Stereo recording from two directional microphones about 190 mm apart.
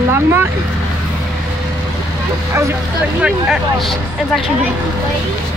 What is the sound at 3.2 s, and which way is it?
Speech, centre (ahead or behind).